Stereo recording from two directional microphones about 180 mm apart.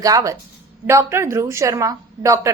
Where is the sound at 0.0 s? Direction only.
20° right (ahead or behind).